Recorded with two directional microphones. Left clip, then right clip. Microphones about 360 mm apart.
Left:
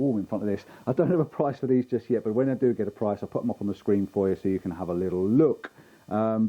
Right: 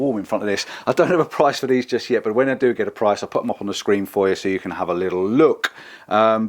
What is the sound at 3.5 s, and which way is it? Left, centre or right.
Speech, centre.